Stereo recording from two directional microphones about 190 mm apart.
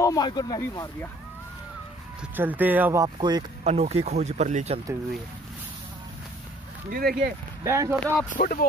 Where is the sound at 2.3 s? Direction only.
10° right (ahead or behind).